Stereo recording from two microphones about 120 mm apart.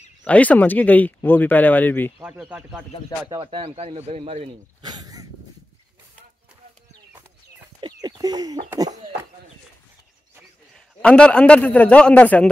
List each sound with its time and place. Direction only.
0.2 s speech: 10° left (ahead or behind)
2.1 s speech: 15° right (ahead or behind)
3.3 s speech: 45° right (ahead or behind); by 4.5 s 60° right (ahead or behind)
4.8 s a sound: 35° right (ahead or behind)
7.8 s bird: 35° right (ahead or behind)
11.0 s speech: 10° left (ahead or behind)